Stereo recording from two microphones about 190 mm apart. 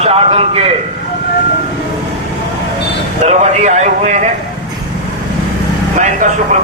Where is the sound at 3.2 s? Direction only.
35° right (ahead or behind).